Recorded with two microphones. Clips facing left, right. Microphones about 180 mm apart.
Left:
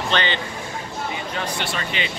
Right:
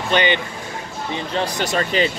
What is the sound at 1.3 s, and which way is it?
Speech, 40° right (ahead or behind).